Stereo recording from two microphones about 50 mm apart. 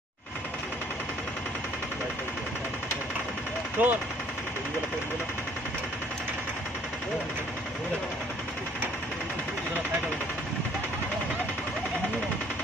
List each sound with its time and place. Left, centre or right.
3.8 s speech: right